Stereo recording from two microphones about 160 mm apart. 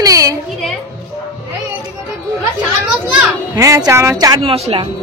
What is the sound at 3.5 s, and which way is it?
Speech, 20° right (ahead or behind).